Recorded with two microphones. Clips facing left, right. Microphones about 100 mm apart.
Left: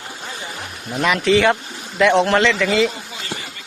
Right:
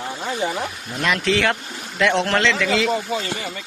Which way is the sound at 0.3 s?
60° right (ahead or behind).